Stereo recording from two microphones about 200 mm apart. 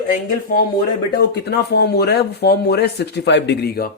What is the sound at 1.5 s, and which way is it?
Speech, 55° left (ahead or behind).